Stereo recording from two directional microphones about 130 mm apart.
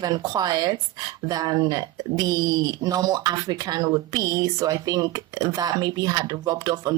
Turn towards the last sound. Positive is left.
turn(degrees=-30)  # may be behind; listen again after turning